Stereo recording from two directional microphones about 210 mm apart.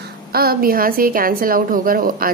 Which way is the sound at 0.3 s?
45° right (ahead or behind).